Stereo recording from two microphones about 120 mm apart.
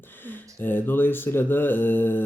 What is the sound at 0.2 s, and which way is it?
Speech, 15° left (ahead or behind).